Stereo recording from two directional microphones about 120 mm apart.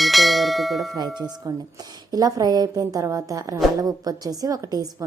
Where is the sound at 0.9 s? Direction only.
35° right (ahead or behind).